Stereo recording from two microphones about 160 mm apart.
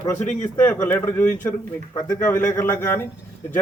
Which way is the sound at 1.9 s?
25° left (ahead or behind).